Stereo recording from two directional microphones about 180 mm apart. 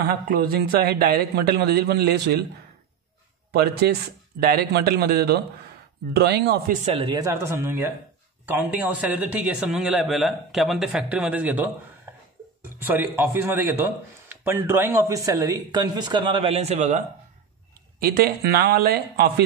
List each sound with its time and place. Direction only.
0.0 s a man's voice: 55° right (ahead or behind)
3.5 s a man's voice: 60° right (ahead or behind)
6.8 s speech: 35° right (ahead or behind)
7.2 s a man's voice: 15° right (ahead or behind)
12.8 s speech: 10° right (ahead or behind); by 17.0 s 35° right (ahead or behind)
17.9 s a man's voice: 55° right (ahead or behind)